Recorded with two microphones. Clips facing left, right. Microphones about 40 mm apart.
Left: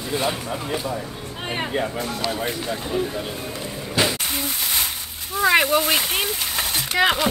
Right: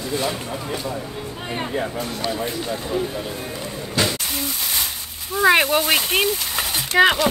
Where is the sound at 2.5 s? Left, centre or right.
Centre.